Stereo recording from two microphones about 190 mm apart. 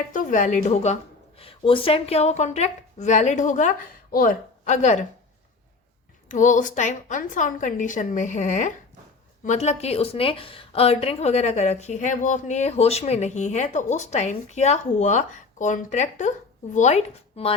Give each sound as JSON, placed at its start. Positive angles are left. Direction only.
{"t": 0.1, "sound": "a woman's voice", "side_deg": 45}
{"t": 6.2, "sound": "a woman's voice", "side_deg": 40}